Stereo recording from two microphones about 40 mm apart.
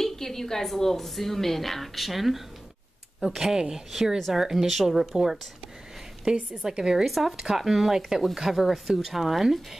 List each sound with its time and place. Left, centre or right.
0.0 s a woman's voice: centre
7.1 s speech: centre